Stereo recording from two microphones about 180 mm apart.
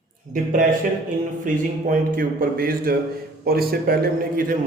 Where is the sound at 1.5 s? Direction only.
45° right (ahead or behind).